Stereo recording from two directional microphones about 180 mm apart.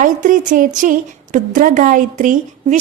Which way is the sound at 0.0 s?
45° right (ahead or behind).